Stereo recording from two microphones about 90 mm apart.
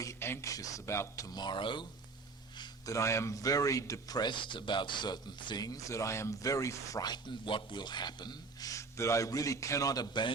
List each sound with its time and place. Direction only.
0.0 s speech: 30° left (ahead or behind); by 1.9 s 60° left (ahead or behind)
2.6 s speech: 40° left (ahead or behind)
4.2 s speech: 60° left (ahead or behind); by 7.0 s 35° left (ahead or behind)
7.0 s speech: 55° left (ahead or behind)